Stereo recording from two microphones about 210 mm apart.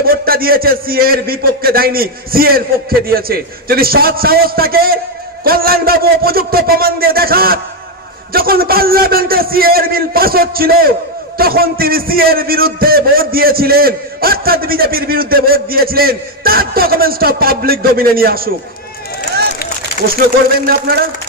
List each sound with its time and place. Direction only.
0.1 s a man's voice: 45° right (ahead or behind)